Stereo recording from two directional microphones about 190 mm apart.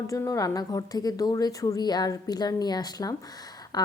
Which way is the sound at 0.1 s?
20° left (ahead or behind).